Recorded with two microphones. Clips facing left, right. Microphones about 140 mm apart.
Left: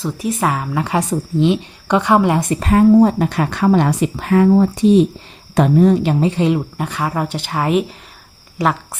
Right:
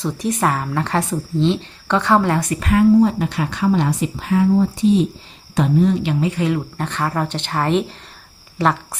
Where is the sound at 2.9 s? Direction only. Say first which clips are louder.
Left 3 dB; 50° left (ahead or behind).